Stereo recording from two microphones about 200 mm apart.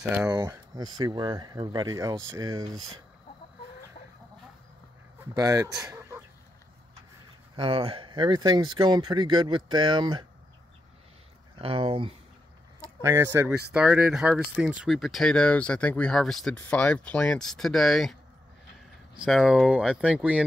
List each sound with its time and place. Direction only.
0.1 s speech: 15° right (ahead or behind)
5.3 s speech: 20° right (ahead or behind)
5.8 s chicken: 5° right (ahead or behind)
7.5 s speech: 25° right (ahead or behind)
11.5 s speech: 25° right (ahead or behind)
13.0 s speech: 10° right (ahead or behind)
19.1 s speech: 5° right (ahead or behind)